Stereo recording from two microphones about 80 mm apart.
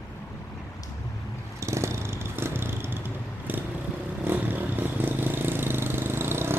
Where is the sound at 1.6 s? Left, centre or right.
Right.